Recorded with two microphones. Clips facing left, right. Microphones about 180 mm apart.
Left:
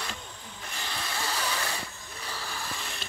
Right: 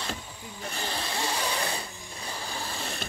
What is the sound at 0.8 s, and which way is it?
Snoring, 30° right (ahead or behind).